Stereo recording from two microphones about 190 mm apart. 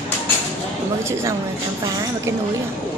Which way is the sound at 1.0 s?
15° right (ahead or behind).